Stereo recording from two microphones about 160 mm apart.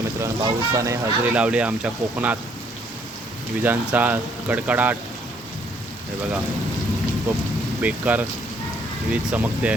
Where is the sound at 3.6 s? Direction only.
10° right (ahead or behind).